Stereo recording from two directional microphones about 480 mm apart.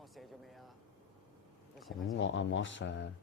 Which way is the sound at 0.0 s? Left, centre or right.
Centre.